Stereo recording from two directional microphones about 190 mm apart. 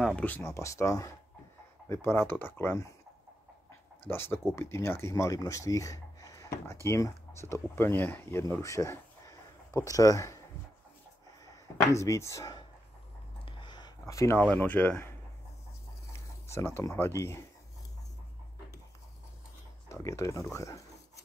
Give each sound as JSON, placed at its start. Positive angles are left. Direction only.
{"t": 0.0, "sound": "speech", "side_deg": 5}
{"t": 4.1, "sound": "speech", "side_deg": 10}
{"t": 11.9, "sound": "speech", "side_deg": 15}
{"t": 13.5, "sound": "a sound", "side_deg": 25}
{"t": 14.4, "sound": "speech", "side_deg": 10}
{"t": 16.4, "sound": "speech", "side_deg": 15}
{"t": 19.9, "sound": "speech", "side_deg": 15}